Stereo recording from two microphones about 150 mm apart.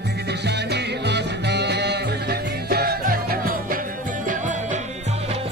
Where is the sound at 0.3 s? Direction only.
90° right.